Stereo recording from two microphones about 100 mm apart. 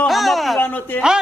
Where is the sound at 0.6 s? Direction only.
15° left (ahead or behind).